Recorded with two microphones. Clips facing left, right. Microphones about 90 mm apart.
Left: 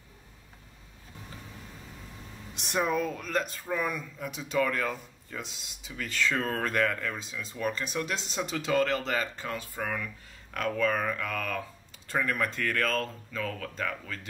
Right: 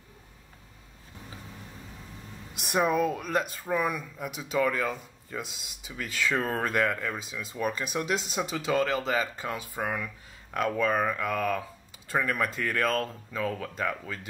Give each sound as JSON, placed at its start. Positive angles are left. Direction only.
{"t": 2.5, "sound": "speech", "side_deg": -10}